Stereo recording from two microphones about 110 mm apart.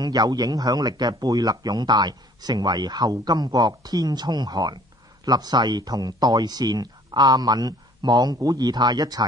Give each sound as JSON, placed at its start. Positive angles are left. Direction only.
{"t": 0.0, "sound": "speech", "side_deg": -40}